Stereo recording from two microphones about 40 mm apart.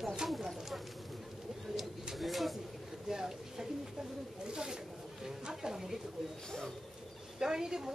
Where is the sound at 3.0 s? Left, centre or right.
Centre.